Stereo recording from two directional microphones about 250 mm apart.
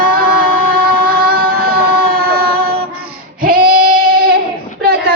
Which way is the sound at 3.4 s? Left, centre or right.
Right.